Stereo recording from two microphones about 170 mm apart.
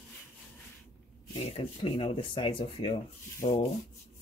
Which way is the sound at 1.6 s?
35° left (ahead or behind).